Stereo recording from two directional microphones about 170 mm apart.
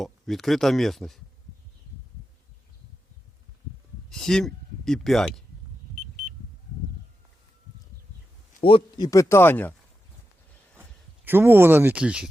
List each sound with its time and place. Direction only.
0.0 s speech: centre (ahead or behind)
4.1 s speech: 5° left (ahead or behind)
8.6 s speech: 30° left (ahead or behind)
9.0 s speech: 15° left (ahead or behind)
11.3 s speech: 15° right (ahead or behind)